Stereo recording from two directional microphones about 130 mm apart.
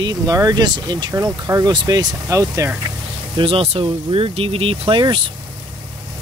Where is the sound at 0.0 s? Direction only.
30° right (ahead or behind).